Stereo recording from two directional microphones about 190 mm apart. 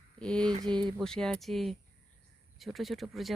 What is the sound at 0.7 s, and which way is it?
Speech, 25° right (ahead or behind).